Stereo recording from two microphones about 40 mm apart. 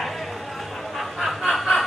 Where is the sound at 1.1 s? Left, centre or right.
Centre.